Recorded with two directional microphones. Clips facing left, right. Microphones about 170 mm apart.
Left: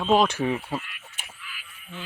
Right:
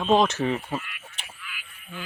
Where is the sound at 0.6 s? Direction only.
5° left (ahead or behind).